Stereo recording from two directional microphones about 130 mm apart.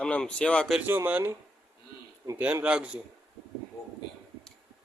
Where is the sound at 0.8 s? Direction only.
15° right (ahead or behind).